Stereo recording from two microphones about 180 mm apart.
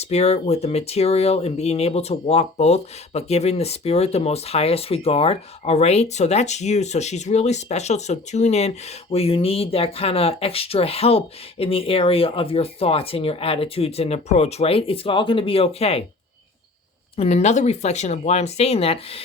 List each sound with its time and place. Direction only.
0.0 s speech: 35° left (ahead or behind)
17.2 s speech: 35° left (ahead or behind)